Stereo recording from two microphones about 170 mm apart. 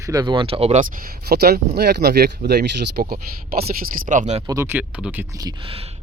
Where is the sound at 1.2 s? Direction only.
70° right (ahead or behind).